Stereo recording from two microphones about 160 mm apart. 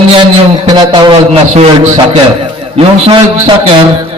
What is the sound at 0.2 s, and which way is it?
Speech, 30° right (ahead or behind).